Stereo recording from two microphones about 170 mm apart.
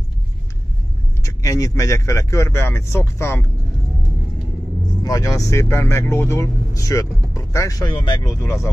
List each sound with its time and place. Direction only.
1.2 s speech: 20° left (ahead or behind)
5.0 s speech: 20° left (ahead or behind)